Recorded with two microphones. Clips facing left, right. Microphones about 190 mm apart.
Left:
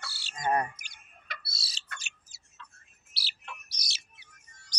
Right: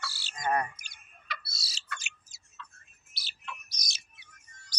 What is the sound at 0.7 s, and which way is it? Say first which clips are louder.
Tick-tock: left 1 dB; 50° left (ahead or behind).